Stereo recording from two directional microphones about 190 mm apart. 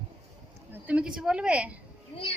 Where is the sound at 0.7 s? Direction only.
5° right (ahead or behind).